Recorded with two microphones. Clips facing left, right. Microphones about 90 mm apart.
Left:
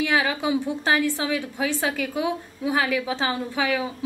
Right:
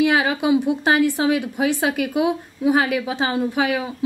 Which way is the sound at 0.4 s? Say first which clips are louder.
Right 6 dB; 15° right (ahead or behind).